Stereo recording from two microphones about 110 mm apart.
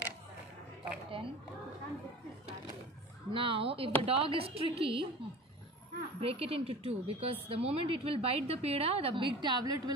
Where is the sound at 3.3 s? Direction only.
55° right (ahead or behind).